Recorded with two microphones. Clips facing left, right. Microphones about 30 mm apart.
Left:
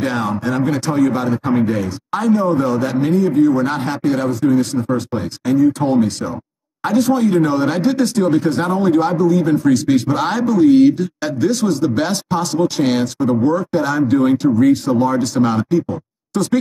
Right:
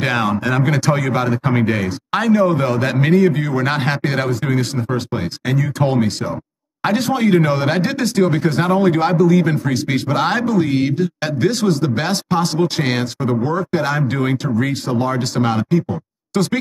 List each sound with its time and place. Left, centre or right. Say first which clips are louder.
0.0 s speech: right 1 dB; right
1.3 s a man's voice: left 1 dB; right
4.9 s speech: left 1 dB; right
6.8 s speech: left 2 dB; right
9.1 s speech: even; right
9.9 s speech: left 1 dB; right
12.1 s speech: right 1 dB; right